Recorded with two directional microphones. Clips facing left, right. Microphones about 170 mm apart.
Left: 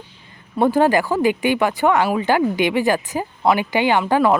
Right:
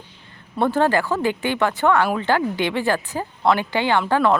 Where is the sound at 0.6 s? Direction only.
15° left (ahead or behind).